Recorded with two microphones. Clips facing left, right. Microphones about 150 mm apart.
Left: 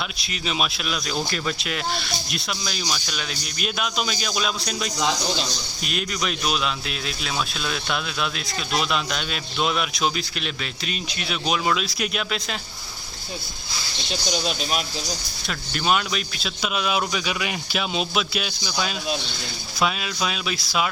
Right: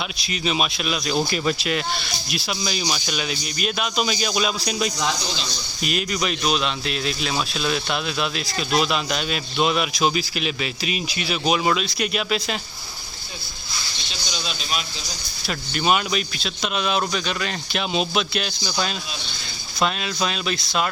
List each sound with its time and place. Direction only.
0.2 s speech: centre (ahead or behind)
14.1 s speech: 50° left (ahead or behind)
15.4 s speech: centre (ahead or behind)